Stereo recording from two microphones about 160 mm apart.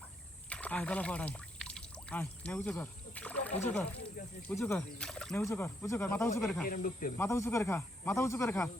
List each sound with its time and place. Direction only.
0.5 s pour: 10° left (ahead or behind)
4.5 s a man's voice: 15° left (ahead or behind)
4.9 s speech: 5° left (ahead or behind)
5.4 s a man's voice: 15° left (ahead or behind)
6.7 s speech: 60° left (ahead or behind)
7.2 s a man's voice: 20° left (ahead or behind)